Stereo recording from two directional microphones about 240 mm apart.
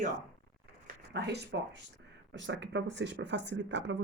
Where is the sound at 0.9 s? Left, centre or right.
Right.